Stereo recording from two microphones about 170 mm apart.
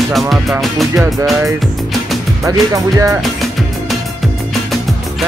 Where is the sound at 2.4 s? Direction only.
20° right (ahead or behind).